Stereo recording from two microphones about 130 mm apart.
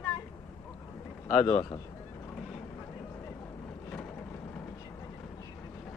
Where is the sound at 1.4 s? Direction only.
35° left (ahead or behind).